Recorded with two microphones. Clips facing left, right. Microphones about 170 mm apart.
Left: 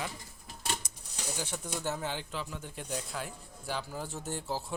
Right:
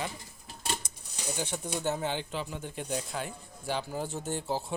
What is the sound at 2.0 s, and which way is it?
Speech, centre (ahead or behind).